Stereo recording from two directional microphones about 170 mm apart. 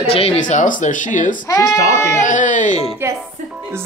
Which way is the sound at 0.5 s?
50° left (ahead or behind).